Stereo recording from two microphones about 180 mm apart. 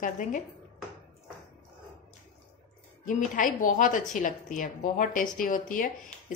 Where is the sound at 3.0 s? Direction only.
45° left (ahead or behind).